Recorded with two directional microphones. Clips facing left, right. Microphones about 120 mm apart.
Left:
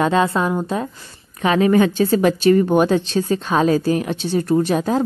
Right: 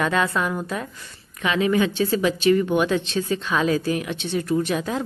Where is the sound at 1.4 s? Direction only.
40° left (ahead or behind).